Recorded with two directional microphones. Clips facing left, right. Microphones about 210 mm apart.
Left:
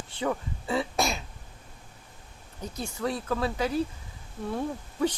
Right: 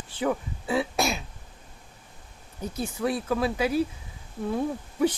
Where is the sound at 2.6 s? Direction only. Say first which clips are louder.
Right 3 dB; 5° right (ahead or behind).